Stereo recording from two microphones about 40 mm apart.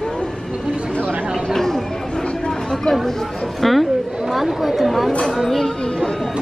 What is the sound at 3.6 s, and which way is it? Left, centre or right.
Speech, centre.